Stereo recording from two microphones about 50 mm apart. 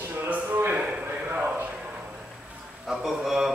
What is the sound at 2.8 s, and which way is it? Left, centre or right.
Speech, centre.